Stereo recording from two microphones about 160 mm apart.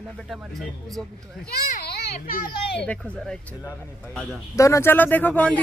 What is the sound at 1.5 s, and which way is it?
A child's voice, 75° left (ahead or behind).